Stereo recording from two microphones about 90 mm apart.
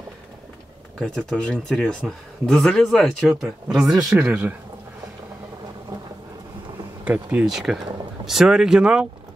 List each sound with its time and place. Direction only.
0.9 s speech: 5° left (ahead or behind); by 4.6 s 15° right (ahead or behind)
7.1 s speech: 15° right (ahead or behind)
7.5 s speech: 5° right (ahead or behind)